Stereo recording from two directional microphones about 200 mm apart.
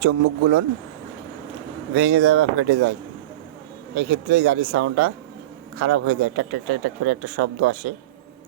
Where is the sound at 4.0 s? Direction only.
60° right (ahead or behind).